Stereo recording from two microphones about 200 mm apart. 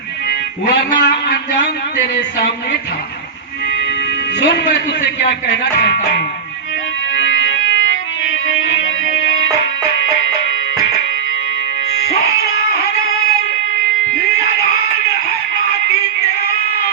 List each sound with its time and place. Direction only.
0.7 s a man's voice: 60° left (ahead or behind)
4.4 s a man's voice: 60° left (ahead or behind)
7.2 s organ: 65° left (ahead or behind)